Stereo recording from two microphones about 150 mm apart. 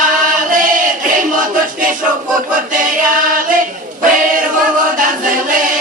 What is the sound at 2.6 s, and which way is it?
Choir, 65° right (ahead or behind).